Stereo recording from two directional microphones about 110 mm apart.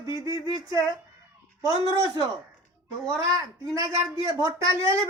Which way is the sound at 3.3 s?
30° right (ahead or behind).